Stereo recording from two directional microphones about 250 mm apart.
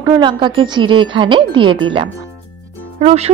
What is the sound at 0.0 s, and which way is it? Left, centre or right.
Speech, centre.